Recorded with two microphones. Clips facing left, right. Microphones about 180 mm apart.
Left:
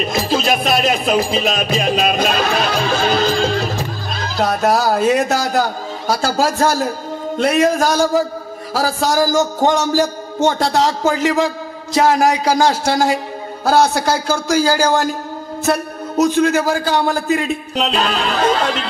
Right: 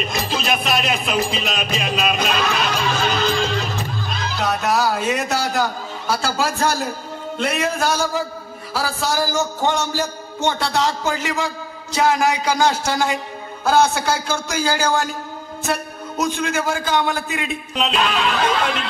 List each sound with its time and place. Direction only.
0.0 s speech: 40° left (ahead or behind)